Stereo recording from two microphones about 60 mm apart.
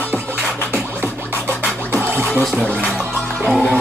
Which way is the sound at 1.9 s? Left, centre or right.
Right.